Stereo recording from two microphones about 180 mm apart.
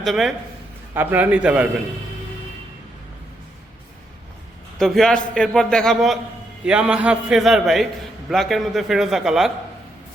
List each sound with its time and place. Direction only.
0.0 s a man's voice: centre (ahead or behind)
4.8 s a man's voice: centre (ahead or behind)